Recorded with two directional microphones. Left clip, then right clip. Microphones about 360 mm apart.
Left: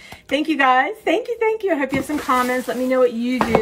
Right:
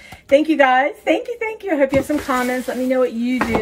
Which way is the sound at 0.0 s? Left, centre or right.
Centre.